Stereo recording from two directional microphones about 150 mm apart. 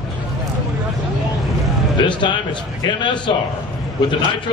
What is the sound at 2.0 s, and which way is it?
A man's voice, 30° left (ahead or behind).